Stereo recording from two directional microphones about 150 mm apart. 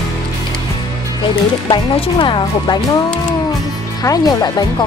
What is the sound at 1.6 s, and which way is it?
Speech, 35° left (ahead or behind).